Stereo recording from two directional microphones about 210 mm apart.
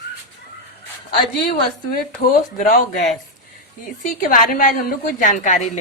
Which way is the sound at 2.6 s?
40° left (ahead or behind).